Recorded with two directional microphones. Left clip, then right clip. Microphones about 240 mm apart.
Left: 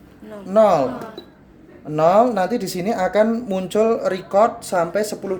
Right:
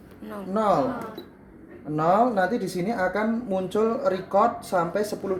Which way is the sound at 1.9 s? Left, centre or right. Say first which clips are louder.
Left 6 dB; left.